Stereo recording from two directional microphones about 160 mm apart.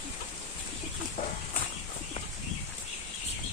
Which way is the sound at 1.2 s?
60° left (ahead or behind).